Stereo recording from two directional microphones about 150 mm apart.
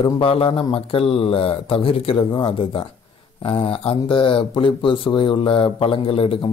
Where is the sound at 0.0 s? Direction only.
35° left (ahead or behind).